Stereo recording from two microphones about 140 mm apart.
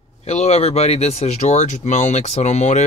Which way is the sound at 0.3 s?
50° left (ahead or behind).